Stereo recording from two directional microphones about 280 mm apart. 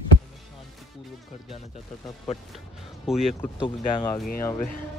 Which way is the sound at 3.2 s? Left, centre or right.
Centre.